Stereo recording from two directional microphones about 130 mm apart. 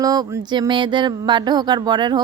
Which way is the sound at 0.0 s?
30° right (ahead or behind).